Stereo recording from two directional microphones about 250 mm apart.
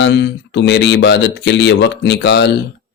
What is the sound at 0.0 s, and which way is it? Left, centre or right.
Speech, left.